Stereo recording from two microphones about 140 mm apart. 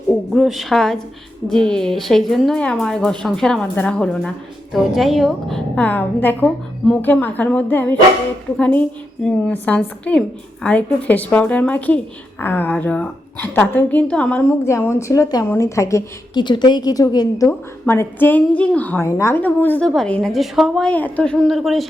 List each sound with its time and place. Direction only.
0.1 s a woman's voice: centre (ahead or behind); by 16.4 s 20° left (ahead or behind)
16.4 s a woman's voice: 35° left (ahead or behind); by 21.8 s centre (ahead or behind)